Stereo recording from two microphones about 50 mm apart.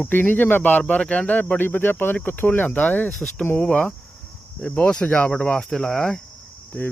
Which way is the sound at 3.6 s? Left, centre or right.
Left.